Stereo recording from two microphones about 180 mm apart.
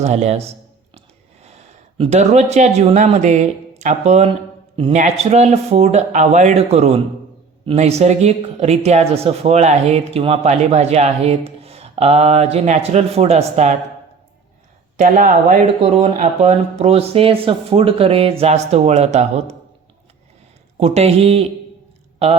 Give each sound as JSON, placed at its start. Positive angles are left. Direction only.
{"t": 0.0, "sound": "speech", "side_deg": -40}
{"t": 14.9, "sound": "speech", "side_deg": -45}
{"t": 20.7, "sound": "speech", "side_deg": -35}